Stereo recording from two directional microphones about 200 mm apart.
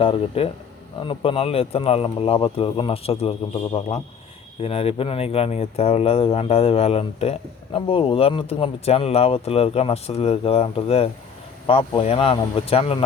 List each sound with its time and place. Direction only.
0.0 s speech: 25° left (ahead or behind)